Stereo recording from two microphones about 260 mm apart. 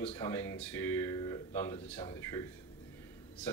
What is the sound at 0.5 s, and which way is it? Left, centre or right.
Speech, centre.